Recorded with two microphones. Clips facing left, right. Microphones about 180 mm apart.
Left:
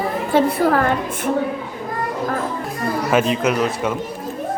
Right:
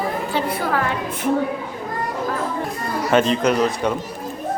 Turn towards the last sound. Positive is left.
turn(degrees=5)  # may be behind; listen again after turning